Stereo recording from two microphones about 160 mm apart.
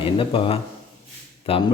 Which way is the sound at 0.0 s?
35° left (ahead or behind).